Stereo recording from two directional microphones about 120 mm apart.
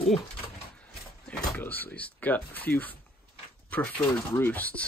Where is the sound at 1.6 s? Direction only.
15° left (ahead or behind).